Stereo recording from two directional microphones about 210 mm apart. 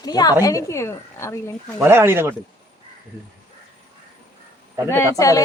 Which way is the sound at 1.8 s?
10° right (ahead or behind).